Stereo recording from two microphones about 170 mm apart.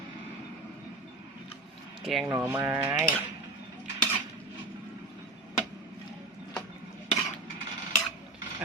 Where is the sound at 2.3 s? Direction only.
15° right (ahead or behind).